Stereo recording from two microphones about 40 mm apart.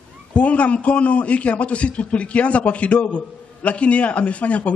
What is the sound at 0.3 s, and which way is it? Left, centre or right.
A man's voice, left.